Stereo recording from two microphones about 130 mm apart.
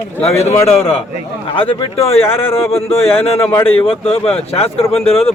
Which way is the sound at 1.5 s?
45° left (ahead or behind).